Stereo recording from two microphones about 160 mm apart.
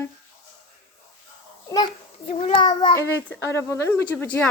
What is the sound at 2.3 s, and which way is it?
Child singing, 35° left (ahead or behind).